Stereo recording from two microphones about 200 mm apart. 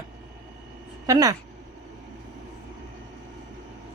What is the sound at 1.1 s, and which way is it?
Speech, 20° right (ahead or behind).